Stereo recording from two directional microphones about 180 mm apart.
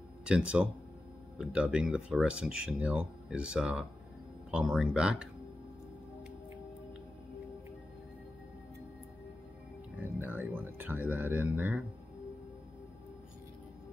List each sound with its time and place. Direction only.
0.2 s speech: 5° right (ahead or behind)
10.2 s music: 10° right (ahead or behind)